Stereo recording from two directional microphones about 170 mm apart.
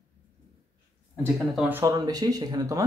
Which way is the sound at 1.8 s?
20° right (ahead or behind).